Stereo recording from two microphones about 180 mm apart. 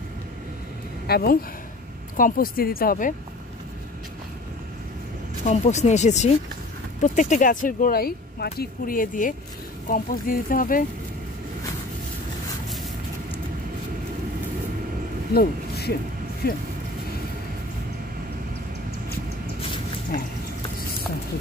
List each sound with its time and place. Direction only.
1.0 s speech: 60° left (ahead or behind)
5.4 s speech: 40° left (ahead or behind)
15.3 s speech: 60° left (ahead or behind)